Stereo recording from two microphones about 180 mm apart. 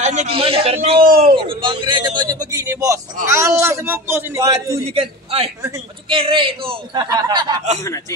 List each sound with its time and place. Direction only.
0.0 s a man's voice: 40° right (ahead or behind)
1.0 s a man's voice: 55° right (ahead or behind)
1.3 s a man's voice: 30° right (ahead or behind)
4.8 s a man's voice: 35° right (ahead or behind)